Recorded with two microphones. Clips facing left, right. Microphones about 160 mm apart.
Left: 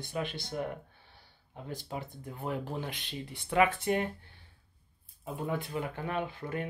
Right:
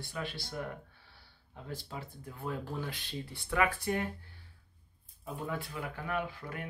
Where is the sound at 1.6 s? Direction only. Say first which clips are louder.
Left 3 dB; 20° left (ahead or behind).